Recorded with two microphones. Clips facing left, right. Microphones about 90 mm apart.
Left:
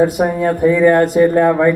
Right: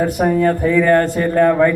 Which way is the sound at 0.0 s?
15° left (ahead or behind).